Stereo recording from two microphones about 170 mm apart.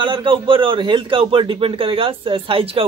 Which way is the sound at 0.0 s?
30° right (ahead or behind).